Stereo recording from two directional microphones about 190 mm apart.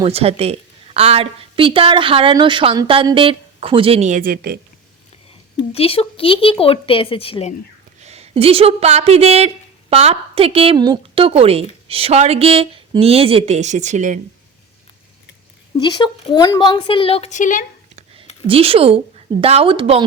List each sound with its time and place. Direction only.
0.0 s speech: 30° right (ahead or behind); by 4.5 s 50° right (ahead or behind)
5.7 s a woman's voice: 30° left (ahead or behind)
8.0 s a woman's voice: 35° right (ahead or behind)
15.8 s a woman's voice: 25° left (ahead or behind); by 17.7 s 45° left (ahead or behind)
18.4 s speech: 30° right (ahead or behind)